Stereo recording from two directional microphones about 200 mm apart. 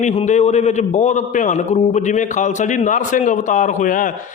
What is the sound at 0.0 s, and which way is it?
A man's voice, 35° left (ahead or behind).